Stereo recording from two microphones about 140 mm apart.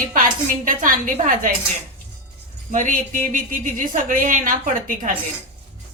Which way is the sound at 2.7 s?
65° right (ahead or behind).